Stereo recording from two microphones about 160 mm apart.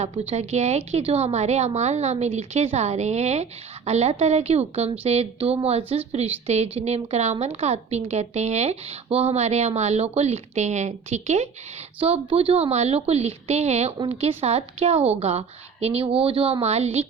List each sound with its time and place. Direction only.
0.0 s a woman's voice: 40° right (ahead or behind)